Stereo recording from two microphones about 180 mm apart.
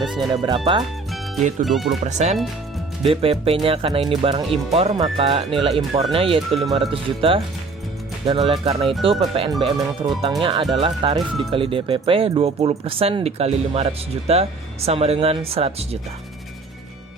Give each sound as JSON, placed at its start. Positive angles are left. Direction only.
{"t": 0.4, "sound": "speech", "side_deg": -25}
{"t": 1.4, "sound": "speech", "side_deg": -40}
{"t": 1.6, "sound": "speech", "side_deg": 0}
{"t": 2.0, "sound": "speech", "side_deg": -40}